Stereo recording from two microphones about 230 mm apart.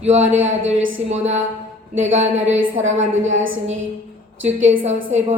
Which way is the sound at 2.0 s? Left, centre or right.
Right.